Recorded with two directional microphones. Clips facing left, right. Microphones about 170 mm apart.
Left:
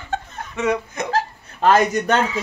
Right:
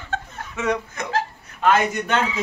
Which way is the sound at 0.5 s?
5° left (ahead or behind).